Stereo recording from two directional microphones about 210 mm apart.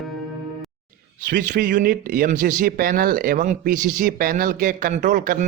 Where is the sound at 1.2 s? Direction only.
40° right (ahead or behind).